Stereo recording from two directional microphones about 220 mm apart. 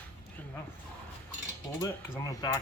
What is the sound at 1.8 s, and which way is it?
Mechanisms, 15° left (ahead or behind).